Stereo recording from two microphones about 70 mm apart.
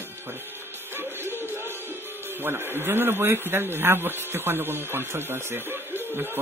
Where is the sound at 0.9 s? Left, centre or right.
Right.